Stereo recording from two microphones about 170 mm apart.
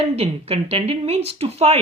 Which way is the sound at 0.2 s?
35° right (ahead or behind).